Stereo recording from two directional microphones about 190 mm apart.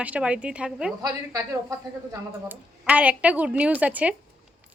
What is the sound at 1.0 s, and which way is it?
A woman's voice, 15° right (ahead or behind).